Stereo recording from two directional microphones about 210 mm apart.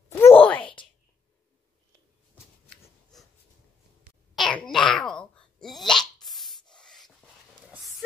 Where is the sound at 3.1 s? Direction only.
Centre (ahead or behind).